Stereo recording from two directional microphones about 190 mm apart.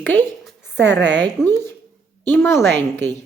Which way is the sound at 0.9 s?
70° right (ahead or behind).